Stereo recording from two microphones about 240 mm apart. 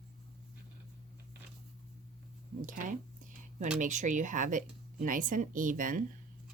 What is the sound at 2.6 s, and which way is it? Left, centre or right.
Speech, right.